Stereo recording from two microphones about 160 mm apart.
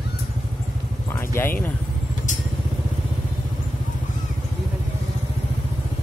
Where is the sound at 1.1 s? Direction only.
15° left (ahead or behind).